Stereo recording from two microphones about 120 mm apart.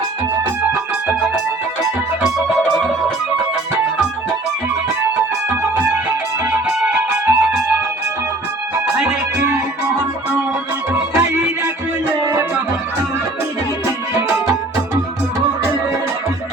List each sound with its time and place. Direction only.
1.0 s organ: 10° right (ahead or behind)
2.2 s music: 5° right (ahead or behind)
5.7 s music: 15° right (ahead or behind)
10.9 s music: 20° right (ahead or behind)